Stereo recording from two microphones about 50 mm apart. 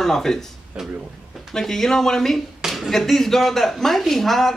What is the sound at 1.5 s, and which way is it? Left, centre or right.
Speech, centre.